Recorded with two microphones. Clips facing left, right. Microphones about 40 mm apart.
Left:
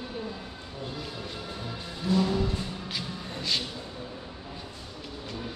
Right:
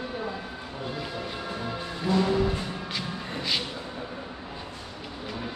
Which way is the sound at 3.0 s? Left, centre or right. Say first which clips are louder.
Right 3 dB; centre.